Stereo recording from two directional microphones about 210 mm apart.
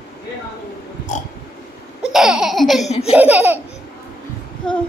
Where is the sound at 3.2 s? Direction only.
5° right (ahead or behind).